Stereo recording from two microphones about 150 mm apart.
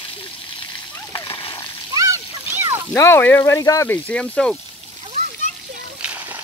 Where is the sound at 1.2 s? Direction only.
35° left (ahead or behind).